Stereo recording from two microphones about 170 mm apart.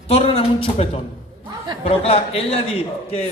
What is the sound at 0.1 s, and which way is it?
Speech, 35° left (ahead or behind).